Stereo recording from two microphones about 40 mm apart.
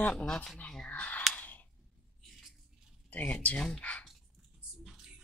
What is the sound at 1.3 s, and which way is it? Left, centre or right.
Sigh, left.